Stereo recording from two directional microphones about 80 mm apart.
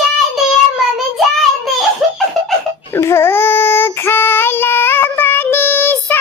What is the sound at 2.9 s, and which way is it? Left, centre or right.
Child singing, left.